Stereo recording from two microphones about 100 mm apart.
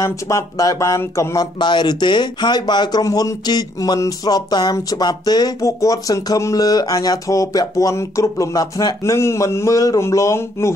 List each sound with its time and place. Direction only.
0.0 s speech: 30° left (ahead or behind)